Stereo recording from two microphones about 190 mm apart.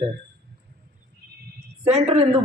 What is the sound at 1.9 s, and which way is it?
Speech, 35° right (ahead or behind).